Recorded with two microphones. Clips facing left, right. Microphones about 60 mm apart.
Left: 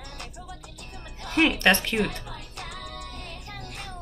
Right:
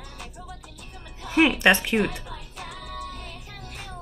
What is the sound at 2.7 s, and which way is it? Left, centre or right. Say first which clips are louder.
Music: right 5 dB; left.